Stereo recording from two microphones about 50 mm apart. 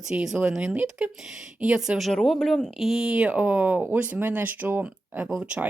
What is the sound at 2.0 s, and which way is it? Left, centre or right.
Speech, centre.